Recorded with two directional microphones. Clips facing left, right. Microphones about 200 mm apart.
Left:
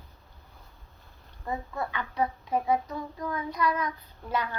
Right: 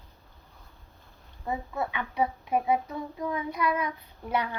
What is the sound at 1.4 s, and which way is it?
Child singing, 10° right (ahead or behind).